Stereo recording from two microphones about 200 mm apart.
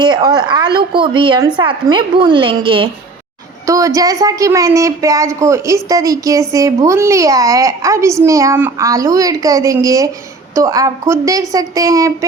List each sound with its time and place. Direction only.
0.0 s a woman's voice: 20° right (ahead or behind)